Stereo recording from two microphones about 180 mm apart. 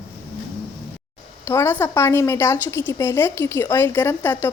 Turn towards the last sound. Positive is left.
turn(degrees=10)  # may be behind; listen again after turning